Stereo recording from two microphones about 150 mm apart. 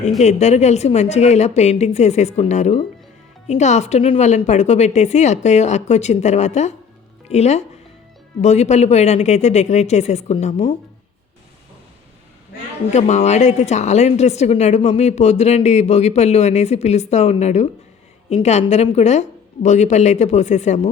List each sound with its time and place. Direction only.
0.2 s a woman's voice: 50° left (ahead or behind)
12.9 s a woman's voice: 50° left (ahead or behind)